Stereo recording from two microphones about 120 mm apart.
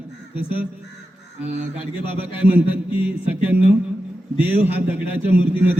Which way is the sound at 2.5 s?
15° right (ahead or behind).